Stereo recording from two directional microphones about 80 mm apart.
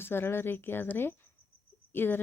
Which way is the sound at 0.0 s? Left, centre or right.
Left.